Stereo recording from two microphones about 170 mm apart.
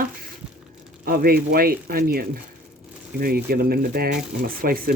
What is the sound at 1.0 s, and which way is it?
Speech, 60° right (ahead or behind).